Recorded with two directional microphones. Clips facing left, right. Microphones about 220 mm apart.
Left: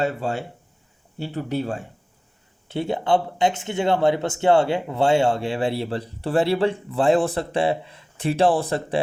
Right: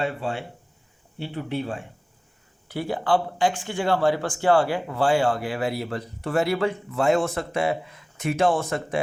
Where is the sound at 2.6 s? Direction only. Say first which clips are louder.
Left 2 dB; 25° left (ahead or behind).